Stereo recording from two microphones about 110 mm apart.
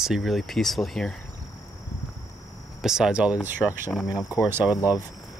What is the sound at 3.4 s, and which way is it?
Speech, 20° left (ahead or behind).